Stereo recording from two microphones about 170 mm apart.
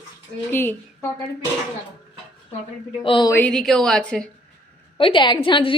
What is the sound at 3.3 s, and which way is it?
Speech, 5° left (ahead or behind).